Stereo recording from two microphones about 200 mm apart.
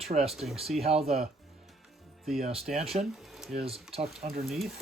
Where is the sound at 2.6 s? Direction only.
Centre (ahead or behind).